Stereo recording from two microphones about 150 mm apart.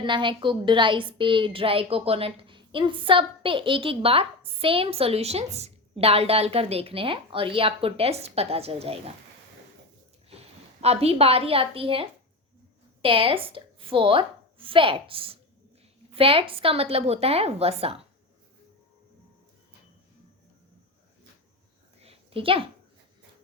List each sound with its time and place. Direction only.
0.0 s a woman's voice: 30° right (ahead or behind)
10.2 s a woman's voice: 45° right (ahead or behind)
22.0 s a sound: 35° right (ahead or behind)